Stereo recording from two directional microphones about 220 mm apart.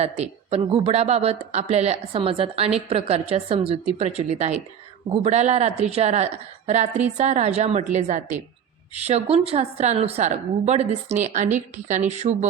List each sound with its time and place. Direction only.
0.0 s a woman's voice: 30° right (ahead or behind)